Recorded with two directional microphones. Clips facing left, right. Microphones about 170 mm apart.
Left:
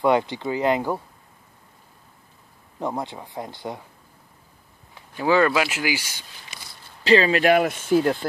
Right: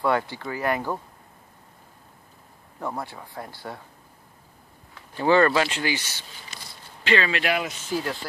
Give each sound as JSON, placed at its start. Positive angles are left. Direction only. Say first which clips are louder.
{"t": 0.0, "sound": "speech", "louder": "left 4 dB", "side_deg": 20}
{"t": 2.8, "sound": "speech", "louder": "left 4 dB", "side_deg": 20}
{"t": 5.1, "sound": "speech", "louder": "even", "side_deg": 5}
{"t": 7.0, "sound": "speech", "louder": "left 6 dB", "side_deg": 35}